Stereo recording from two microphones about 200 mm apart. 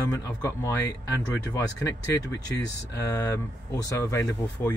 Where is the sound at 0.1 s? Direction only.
15° left (ahead or behind).